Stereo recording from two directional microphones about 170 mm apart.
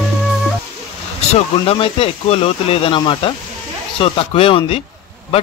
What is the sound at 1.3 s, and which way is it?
Speech, 35° left (ahead or behind).